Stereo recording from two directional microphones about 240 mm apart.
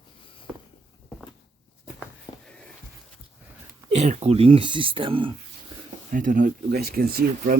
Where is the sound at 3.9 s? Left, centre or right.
Right.